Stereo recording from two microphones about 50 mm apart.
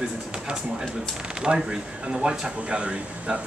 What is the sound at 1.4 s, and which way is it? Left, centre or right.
Speech, centre.